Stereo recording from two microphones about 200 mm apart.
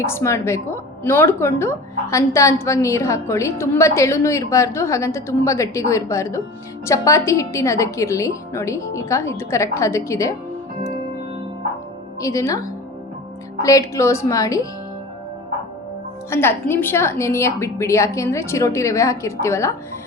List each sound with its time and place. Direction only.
0.0 s a woman's voice: 15° left (ahead or behind)
12.2 s a woman's voice: 15° left (ahead or behind)
16.3 s a woman's voice: 10° left (ahead or behind)